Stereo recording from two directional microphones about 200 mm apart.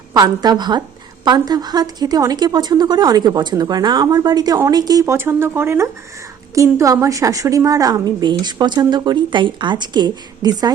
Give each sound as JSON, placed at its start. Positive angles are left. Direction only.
{"t": 0.1, "sound": "a woman's voice", "side_deg": -20}